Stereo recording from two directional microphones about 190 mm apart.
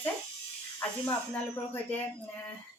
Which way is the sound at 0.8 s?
5° left (ahead or behind).